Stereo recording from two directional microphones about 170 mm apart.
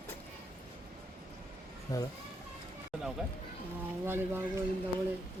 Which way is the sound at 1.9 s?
20° left (ahead or behind).